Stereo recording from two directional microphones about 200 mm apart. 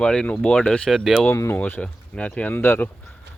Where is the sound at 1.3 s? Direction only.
10° left (ahead or behind).